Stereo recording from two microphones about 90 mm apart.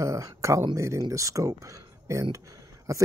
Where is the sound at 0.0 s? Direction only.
35° right (ahead or behind).